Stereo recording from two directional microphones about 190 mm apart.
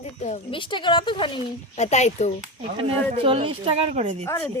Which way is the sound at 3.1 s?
25° right (ahead or behind).